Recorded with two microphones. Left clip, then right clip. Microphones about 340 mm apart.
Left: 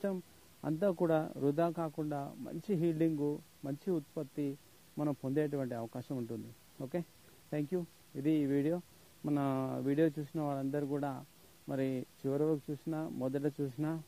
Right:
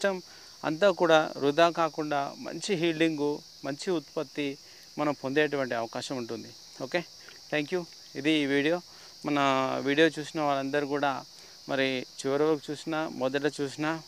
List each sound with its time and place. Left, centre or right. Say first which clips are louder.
0.0 s speech: right 10 dB; centre
3.2 s speech: right 7 dB; centre